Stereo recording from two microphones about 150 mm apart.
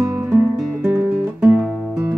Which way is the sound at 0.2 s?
5° right (ahead or behind).